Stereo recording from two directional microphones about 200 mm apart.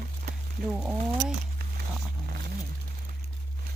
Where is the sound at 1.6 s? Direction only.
50° right (ahead or behind).